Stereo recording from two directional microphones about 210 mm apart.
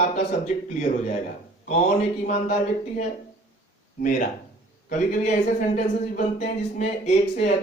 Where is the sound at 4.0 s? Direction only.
40° left (ahead or behind).